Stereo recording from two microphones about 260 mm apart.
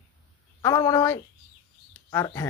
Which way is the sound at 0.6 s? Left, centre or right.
Centre.